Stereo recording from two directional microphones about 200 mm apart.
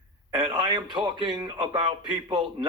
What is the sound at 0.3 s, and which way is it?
A man's voice, 20° right (ahead or behind).